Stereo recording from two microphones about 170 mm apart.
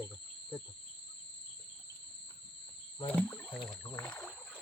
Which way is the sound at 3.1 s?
5° left (ahead or behind).